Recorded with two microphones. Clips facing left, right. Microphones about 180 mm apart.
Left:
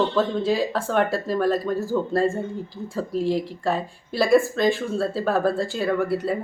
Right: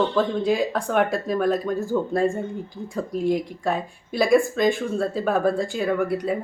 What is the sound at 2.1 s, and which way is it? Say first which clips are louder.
Speech: left 1 dB; centre (ahead or behind).